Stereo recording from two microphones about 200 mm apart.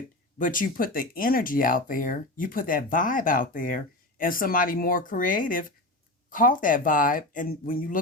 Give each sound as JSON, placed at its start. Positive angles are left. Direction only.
{"t": 0.3, "sound": "speech", "side_deg": 40}